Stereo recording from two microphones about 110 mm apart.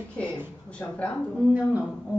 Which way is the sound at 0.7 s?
10° left (ahead or behind).